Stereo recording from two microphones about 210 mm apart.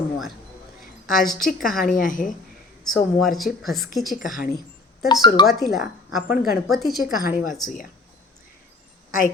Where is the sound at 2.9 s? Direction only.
Centre (ahead or behind).